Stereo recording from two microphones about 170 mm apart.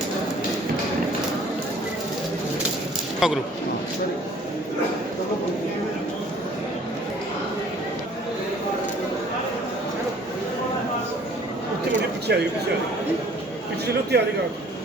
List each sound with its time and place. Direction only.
3.2 s a man's voice: centre (ahead or behind)
12.3 s a man's voice: 75° right (ahead or behind)
14.1 s a man's voice: 75° right (ahead or behind)